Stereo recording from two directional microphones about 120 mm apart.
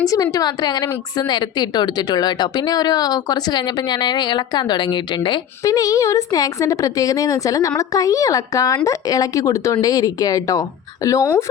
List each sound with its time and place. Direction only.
0.1 s speech: 30° left (ahead or behind)